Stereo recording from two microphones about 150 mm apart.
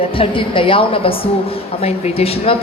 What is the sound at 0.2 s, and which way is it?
A man's voice, 35° left (ahead or behind).